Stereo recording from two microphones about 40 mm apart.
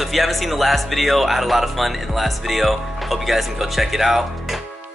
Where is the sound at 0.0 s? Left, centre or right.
Centre.